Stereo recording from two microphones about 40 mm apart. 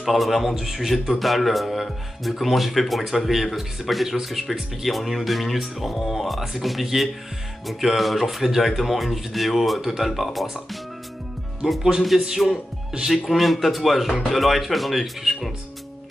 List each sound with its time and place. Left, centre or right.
0.0 s a man's voice: centre
11.6 s a man's voice: centre
13.3 s a man's voice: centre